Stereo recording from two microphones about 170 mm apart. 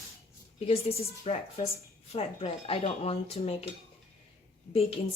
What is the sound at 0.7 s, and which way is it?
Speech, 35° left (ahead or behind).